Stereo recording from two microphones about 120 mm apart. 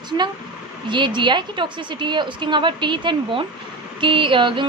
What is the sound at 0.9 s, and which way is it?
Speech, 40° right (ahead or behind).